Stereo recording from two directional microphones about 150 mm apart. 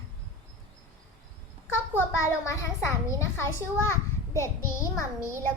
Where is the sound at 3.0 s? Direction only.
20° left (ahead or behind).